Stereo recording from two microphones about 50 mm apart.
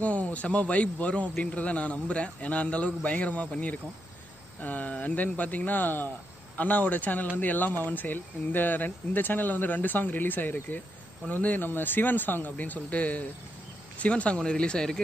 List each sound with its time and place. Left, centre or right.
0.0 s a man's voice: left